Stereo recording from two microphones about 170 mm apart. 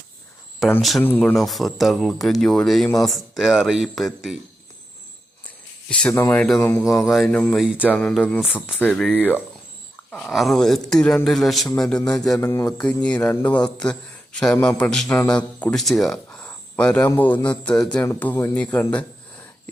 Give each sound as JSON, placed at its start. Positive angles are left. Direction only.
{"t": 0.8, "sound": "speech", "side_deg": 0}
{"t": 5.9, "sound": "speech", "side_deg": 5}
{"t": 7.1, "sound": "speech", "side_deg": 5}
{"t": 12.5, "sound": "speech", "side_deg": 15}